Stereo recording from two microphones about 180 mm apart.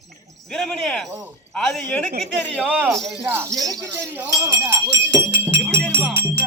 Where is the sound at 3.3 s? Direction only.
15° right (ahead or behind).